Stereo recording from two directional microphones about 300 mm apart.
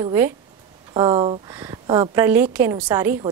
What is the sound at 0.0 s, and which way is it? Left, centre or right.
A woman's voice, centre.